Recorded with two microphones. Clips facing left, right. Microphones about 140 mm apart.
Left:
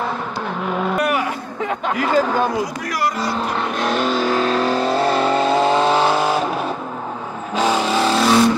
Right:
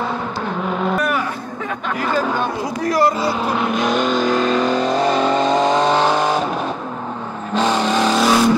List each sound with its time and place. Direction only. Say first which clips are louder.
2.9 s speech: right 9 dB; 25° right (ahead or behind)
3.2 s vehicle: right 2 dB; centre (ahead or behind)
7.5 s vehicle: right 1 dB; 10° left (ahead or behind)